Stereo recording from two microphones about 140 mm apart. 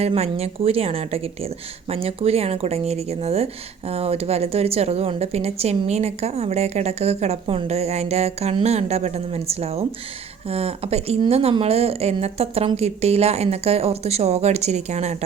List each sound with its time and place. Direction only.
0.0 s speech: 45° right (ahead or behind)